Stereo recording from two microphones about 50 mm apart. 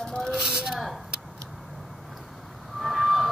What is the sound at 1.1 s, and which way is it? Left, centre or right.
Tick-tock, centre.